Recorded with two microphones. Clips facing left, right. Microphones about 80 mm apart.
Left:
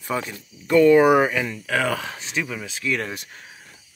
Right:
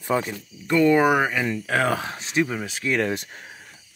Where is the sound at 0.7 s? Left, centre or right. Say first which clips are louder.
Left 4 dB; centre.